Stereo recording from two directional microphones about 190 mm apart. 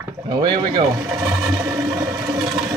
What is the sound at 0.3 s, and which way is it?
Speech, 20° right (ahead or behind).